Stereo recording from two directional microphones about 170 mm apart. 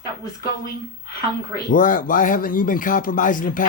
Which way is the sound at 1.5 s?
55° left (ahead or behind).